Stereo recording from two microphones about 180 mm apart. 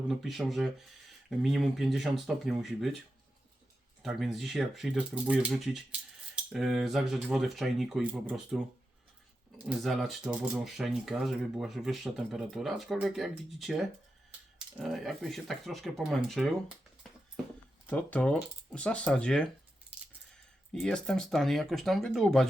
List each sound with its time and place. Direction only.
0.1 s speech: centre (ahead or behind)
4.0 s speech: centre (ahead or behind)
17.8 s speech: 10° left (ahead or behind)